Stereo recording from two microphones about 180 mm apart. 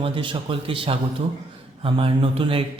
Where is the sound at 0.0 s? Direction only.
30° right (ahead or behind).